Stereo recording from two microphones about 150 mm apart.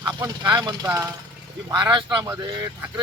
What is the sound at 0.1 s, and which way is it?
Speech, 25° right (ahead or behind).